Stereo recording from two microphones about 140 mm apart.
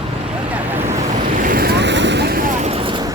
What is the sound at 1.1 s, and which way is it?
Vehicle, 75° right (ahead or behind).